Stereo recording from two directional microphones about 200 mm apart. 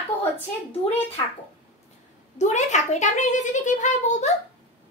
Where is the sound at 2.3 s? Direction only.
35° left (ahead or behind).